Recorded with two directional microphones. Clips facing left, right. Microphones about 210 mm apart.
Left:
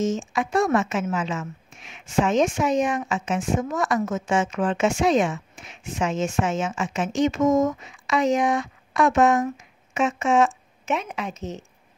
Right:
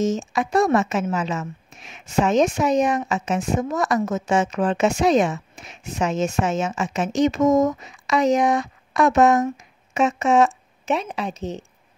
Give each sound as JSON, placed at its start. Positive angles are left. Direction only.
{"t": 0.0, "sound": "a woman's voice", "side_deg": -40}